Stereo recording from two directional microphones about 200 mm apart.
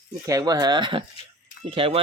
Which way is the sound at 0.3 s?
15° right (ahead or behind).